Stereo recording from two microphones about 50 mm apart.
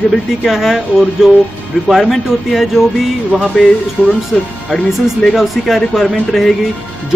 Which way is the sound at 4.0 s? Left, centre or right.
Right.